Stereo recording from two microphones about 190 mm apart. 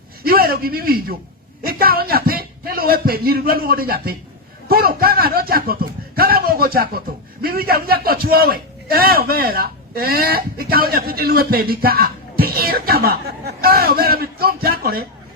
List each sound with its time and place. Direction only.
0.2 s a man's voice: 50° right (ahead or behind)